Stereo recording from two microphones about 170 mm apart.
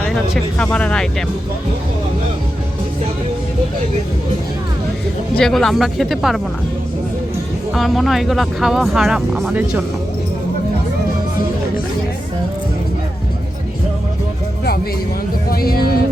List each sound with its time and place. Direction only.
0.6 s speech: 5° left (ahead or behind)
5.3 s speech: 5° left (ahead or behind)
7.7 s speech: centre (ahead or behind)
15.4 s speech: 60° left (ahead or behind)